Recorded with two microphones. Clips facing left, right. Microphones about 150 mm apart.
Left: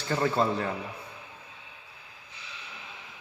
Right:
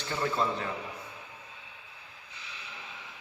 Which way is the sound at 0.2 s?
40° left (ahead or behind).